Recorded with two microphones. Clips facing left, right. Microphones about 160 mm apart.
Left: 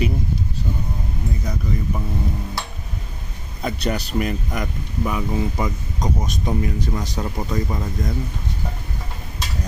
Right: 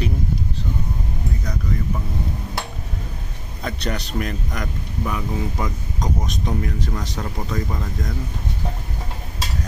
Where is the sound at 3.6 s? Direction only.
5° left (ahead or behind).